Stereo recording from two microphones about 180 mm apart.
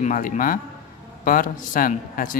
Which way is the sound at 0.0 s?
45° left (ahead or behind).